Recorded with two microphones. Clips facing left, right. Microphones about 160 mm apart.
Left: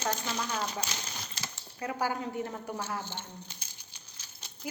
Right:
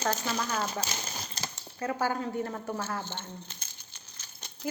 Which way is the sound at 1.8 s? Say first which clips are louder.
Right 2 dB; 15° left (ahead or behind).